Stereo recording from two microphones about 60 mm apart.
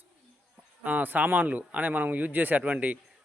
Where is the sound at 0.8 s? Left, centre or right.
Right.